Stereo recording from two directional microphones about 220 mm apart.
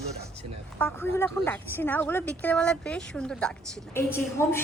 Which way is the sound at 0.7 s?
10° left (ahead or behind).